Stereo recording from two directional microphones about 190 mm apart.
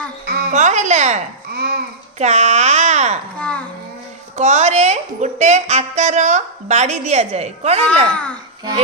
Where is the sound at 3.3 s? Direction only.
5° left (ahead or behind).